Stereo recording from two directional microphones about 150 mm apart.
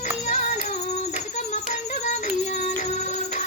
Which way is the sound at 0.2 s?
50° left (ahead or behind).